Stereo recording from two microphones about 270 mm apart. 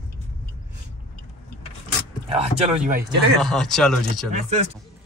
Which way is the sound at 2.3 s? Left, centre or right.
Right.